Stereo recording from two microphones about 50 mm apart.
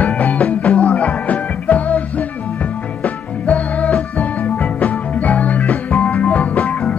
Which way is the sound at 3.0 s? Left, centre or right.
Left.